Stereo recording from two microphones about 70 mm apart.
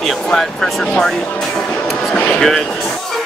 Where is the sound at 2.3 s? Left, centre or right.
Centre.